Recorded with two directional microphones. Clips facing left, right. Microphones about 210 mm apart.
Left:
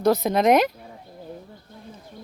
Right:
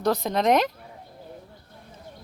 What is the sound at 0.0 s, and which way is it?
Speech, 5° left (ahead or behind).